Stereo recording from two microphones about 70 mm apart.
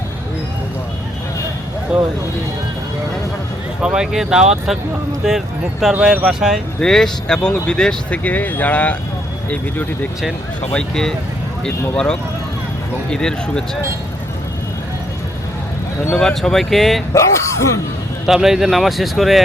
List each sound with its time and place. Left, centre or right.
1.9 s speech: centre
3.8 s speech: centre
5.9 s speech: centre
6.7 s speech: centre
8.2 s speech: left
10.7 s speech: centre
16.1 s speech: centre
17.2 s speech: left
18.3 s speech: centre